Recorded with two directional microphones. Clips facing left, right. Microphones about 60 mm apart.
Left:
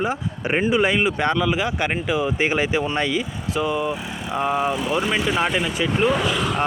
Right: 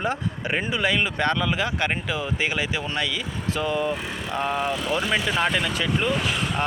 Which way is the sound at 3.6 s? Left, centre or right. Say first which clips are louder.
Left 3 dB; centre.